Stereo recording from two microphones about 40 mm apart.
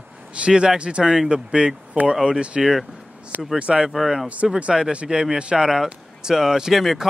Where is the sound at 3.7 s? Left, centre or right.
Centre.